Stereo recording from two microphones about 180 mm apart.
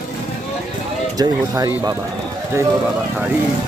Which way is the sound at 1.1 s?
20° right (ahead or behind).